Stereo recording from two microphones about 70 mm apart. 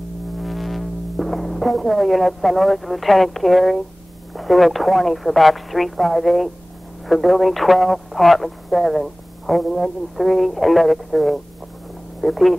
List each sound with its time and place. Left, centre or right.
0.4 s speech: centre